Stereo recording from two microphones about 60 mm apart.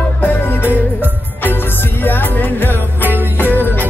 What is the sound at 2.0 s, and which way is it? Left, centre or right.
Music, left.